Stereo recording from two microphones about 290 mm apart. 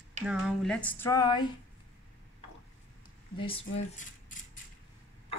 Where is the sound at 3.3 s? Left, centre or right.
Centre.